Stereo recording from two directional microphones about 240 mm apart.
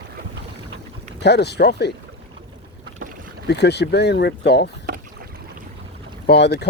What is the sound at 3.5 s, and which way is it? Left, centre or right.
Speech, left.